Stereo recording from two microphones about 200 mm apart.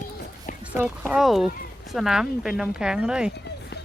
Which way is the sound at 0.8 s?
5° right (ahead or behind).